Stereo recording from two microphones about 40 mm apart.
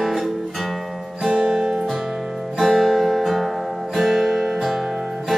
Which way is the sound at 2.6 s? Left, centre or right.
Centre.